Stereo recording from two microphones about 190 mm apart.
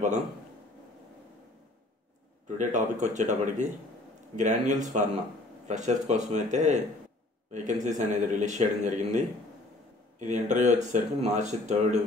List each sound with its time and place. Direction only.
2.4 s speech: 40° right (ahead or behind)